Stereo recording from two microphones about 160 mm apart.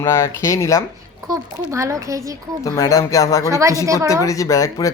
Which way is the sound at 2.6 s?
20° left (ahead or behind).